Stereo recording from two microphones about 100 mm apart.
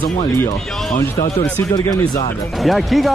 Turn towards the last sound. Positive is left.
turn(degrees=0)  # may be behind; listen again after turning